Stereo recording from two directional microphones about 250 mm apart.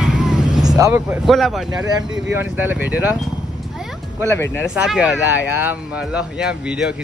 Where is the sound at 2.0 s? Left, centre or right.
Right.